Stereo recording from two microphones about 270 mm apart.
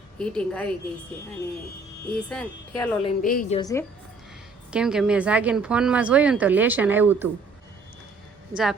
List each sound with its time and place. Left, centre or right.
0.2 s speech: centre
2.0 s speech: centre
3.0 s speech: left
3.6 s a woman's voice: centre
4.7 s speech: centre